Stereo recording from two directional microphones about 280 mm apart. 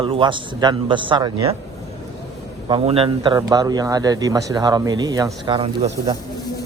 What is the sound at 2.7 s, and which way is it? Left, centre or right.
Speech, centre.